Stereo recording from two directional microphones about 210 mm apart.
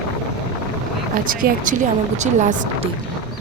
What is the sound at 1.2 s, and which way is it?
Speech, 40° right (ahead or behind).